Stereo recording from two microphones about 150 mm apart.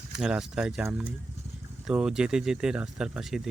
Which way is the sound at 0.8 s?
15° right (ahead or behind).